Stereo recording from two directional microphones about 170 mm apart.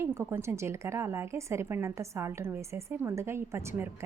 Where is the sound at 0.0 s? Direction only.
15° right (ahead or behind).